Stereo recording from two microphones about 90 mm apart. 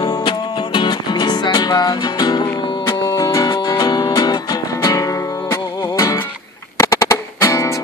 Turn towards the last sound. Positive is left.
turn(degrees=30)  # may be behind; listen again after turning